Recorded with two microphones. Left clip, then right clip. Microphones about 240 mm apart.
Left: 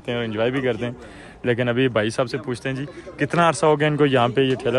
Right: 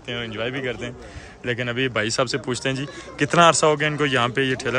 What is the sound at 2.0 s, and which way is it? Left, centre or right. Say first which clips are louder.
Speech: even; centre.